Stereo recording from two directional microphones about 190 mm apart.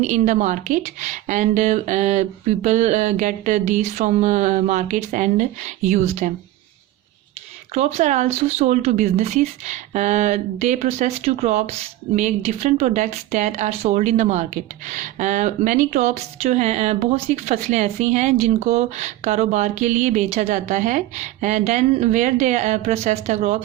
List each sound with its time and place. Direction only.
0.0 s speech: 40° right (ahead or behind)
7.7 s speech: 35° right (ahead or behind)